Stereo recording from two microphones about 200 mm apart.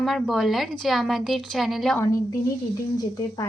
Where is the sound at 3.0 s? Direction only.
20° left (ahead or behind).